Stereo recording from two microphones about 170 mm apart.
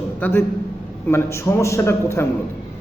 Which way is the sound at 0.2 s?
10° left (ahead or behind).